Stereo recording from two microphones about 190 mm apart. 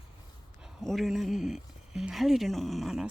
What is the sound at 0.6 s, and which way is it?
Speech, centre (ahead or behind).